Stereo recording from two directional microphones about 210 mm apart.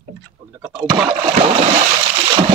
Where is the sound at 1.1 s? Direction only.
25° right (ahead or behind).